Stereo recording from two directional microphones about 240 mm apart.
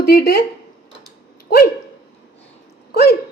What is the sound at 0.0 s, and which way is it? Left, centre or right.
Speech, left.